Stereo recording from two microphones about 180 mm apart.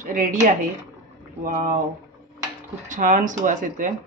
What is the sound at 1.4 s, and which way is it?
Speech, 50° right (ahead or behind).